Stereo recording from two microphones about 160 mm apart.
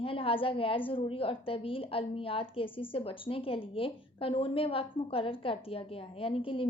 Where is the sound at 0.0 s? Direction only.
35° left (ahead or behind).